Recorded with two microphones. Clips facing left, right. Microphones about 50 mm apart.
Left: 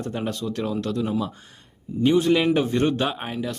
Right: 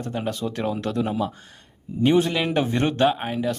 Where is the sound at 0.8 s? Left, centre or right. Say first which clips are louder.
Right 1 dB; right.